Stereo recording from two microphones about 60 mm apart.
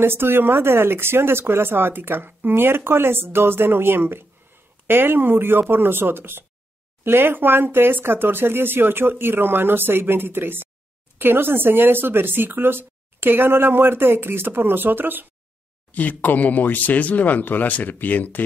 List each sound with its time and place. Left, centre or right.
0.0 s speech: right
15.9 s speech: left